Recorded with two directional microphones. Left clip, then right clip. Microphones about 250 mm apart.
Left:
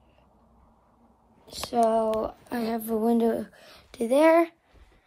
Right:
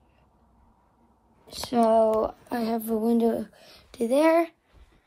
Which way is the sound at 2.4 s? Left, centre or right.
Centre.